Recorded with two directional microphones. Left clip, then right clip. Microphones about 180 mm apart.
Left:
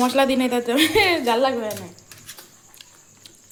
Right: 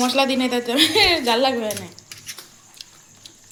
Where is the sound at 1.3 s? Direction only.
5° right (ahead or behind).